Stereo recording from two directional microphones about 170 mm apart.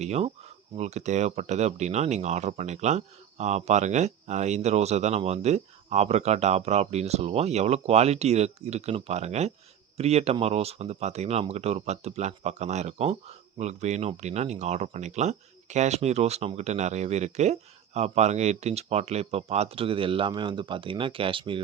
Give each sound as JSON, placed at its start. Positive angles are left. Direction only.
{"t": 0.0, "sound": "speech", "side_deg": -40}